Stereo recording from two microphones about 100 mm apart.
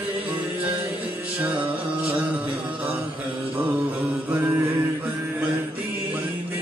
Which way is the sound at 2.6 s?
15° right (ahead or behind).